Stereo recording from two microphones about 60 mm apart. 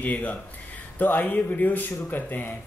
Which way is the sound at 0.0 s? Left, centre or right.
Left.